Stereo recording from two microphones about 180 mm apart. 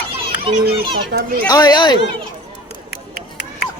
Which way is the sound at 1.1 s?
70° right (ahead or behind).